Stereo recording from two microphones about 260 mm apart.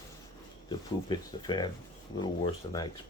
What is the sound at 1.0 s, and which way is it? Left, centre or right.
Speech, centre.